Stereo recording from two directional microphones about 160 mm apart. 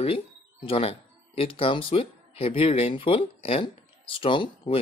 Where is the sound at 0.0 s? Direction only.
35° left (ahead or behind).